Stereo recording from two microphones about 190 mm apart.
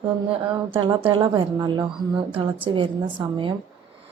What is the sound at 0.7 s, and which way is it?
Speech, 25° right (ahead or behind).